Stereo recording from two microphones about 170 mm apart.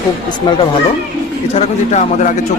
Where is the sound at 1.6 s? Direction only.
45° left (ahead or behind).